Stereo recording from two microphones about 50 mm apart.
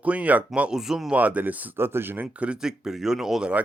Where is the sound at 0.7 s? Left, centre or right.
Centre.